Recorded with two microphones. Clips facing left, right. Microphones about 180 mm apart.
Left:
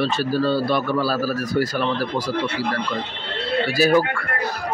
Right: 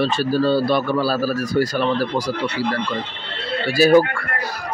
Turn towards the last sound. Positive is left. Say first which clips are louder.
# right 4 dB
turn(degrees=-30)  # may be behind; listen again after turning